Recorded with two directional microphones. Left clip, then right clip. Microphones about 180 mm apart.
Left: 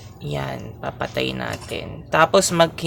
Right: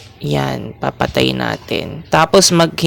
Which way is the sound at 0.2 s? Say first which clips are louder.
Right 9 dB; 55° right (ahead or behind).